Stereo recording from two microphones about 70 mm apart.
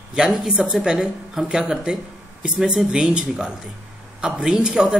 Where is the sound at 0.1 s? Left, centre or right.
Centre.